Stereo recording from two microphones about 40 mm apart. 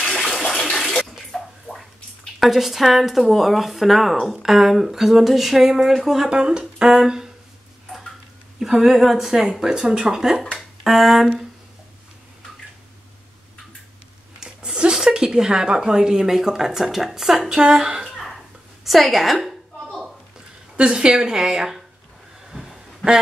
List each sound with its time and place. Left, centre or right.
0.0 s bathtub: centre
1.3 s a sound: centre
2.4 s speech: centre
6.3 s speech: right
8.5 s speech: centre
10.8 s speech: centre
14.4 s speech: centre
17.5 s speech: centre
18.1 s a sound: centre
18.9 s speech: centre
20.7 s speech: right
22.5 s a sound: centre